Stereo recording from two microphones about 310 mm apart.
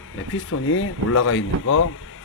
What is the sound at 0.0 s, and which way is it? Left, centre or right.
Speech, left.